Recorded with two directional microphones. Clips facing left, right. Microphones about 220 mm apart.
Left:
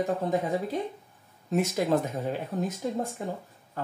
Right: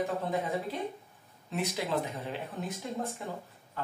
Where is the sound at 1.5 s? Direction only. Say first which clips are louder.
Left 7 dB; 45° left (ahead or behind).